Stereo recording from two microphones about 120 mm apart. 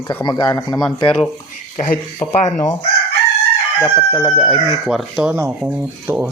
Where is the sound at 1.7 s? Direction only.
65° left (ahead or behind).